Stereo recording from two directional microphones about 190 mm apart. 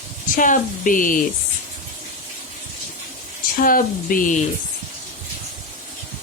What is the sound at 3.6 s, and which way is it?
Speech, 45° left (ahead or behind).